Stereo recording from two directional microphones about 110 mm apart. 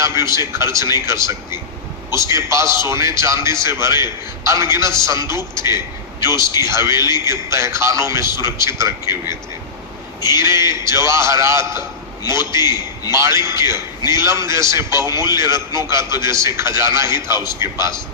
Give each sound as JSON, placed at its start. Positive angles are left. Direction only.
{"t": 0.0, "sound": "a man's voice", "side_deg": -25}